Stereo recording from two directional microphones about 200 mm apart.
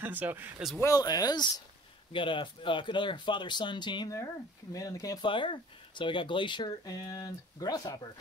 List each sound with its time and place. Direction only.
0.0 s speech: 10° right (ahead or behind)
0.7 s speech: 15° left (ahead or behind)